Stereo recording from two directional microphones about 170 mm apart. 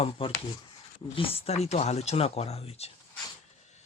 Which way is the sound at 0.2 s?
30° left (ahead or behind).